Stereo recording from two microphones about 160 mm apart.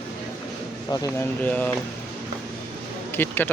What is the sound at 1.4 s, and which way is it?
Speech, 10° left (ahead or behind).